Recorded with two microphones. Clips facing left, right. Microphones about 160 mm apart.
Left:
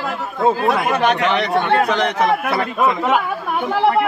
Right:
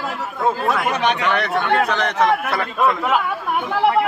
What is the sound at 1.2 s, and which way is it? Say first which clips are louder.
A man's voice: left 3 dB; 15° left (ahead or behind).